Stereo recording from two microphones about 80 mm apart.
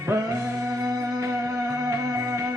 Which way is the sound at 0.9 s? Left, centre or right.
Right.